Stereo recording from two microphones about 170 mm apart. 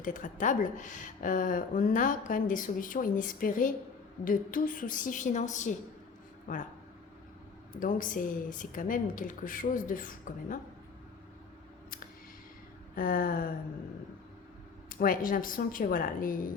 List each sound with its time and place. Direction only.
0.0 s a woman's voice: 50° left (ahead or behind)
7.8 s a woman's voice: 50° left (ahead or behind)
13.0 s speech: 55° left (ahead or behind)
14.8 s speech: 55° left (ahead or behind)